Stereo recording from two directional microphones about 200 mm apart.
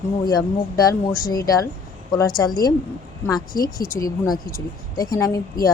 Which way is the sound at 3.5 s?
45° left (ahead or behind).